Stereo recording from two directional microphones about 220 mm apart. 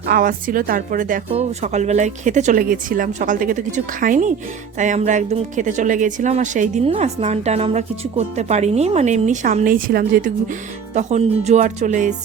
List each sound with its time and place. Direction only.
0.0 s speech: 40° right (ahead or behind)